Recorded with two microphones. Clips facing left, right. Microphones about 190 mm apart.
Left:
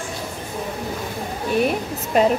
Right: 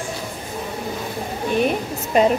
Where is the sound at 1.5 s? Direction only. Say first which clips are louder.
Even; centre (ahead or behind).